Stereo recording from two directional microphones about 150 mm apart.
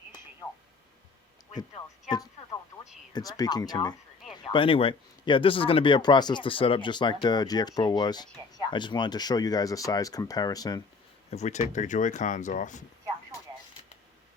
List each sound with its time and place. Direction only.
2.0 s radio: 25° left (ahead or behind)
3.1 s speech: 25° left (ahead or behind)
4.2 s a sound: centre (ahead or behind)
4.5 s speech: 35° left (ahead or behind)
11.3 s speech: 50° left (ahead or behind)